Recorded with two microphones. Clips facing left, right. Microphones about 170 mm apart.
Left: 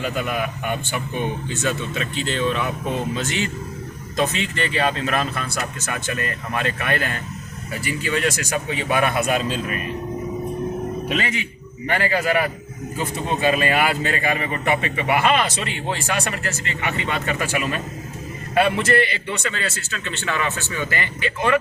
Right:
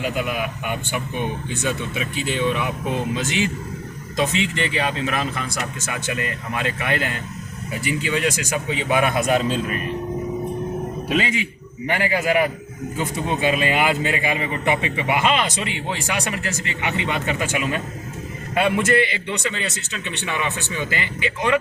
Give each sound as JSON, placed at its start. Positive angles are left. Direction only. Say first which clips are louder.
{"t": 0.0, "sound": "a man's voice", "louder": "even", "side_deg": -10}
{"t": 11.2, "sound": "a man's voice", "louder": "right 2 dB", "side_deg": -10}